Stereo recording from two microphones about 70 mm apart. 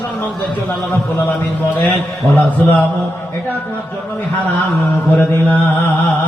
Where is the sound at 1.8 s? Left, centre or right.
Left.